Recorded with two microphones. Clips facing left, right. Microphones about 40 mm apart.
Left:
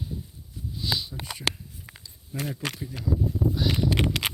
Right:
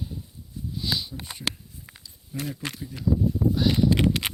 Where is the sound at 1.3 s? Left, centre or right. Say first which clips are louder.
Left 4 dB; left.